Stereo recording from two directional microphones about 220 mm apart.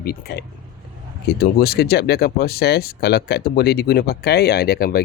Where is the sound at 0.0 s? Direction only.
45° left (ahead or behind).